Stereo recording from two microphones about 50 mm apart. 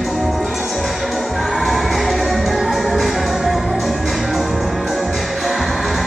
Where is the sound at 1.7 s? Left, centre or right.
Centre.